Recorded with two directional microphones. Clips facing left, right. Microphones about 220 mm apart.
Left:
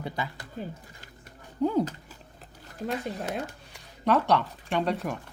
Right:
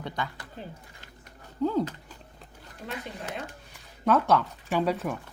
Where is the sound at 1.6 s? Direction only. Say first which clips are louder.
Left 1 dB; 10° left (ahead or behind).